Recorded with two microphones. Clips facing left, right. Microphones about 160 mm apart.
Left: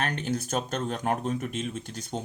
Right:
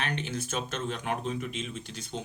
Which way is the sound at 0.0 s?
45° left (ahead or behind).